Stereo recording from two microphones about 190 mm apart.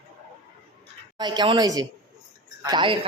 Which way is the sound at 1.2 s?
25° right (ahead or behind).